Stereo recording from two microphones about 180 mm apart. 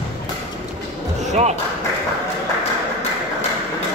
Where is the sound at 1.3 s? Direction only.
40° right (ahead or behind).